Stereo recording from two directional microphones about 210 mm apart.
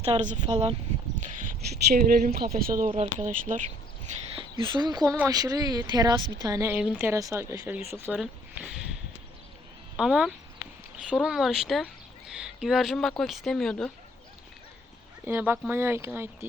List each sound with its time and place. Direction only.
0.0 s speech: 30° right (ahead or behind)
2.9 s speech: 30° right (ahead or behind)
4.4 s a woman's voice: 25° right (ahead or behind); by 8.8 s 5° right (ahead or behind)
10.0 s speech: 5° right (ahead or behind)
15.2 s a woman's voice: 10° right (ahead or behind)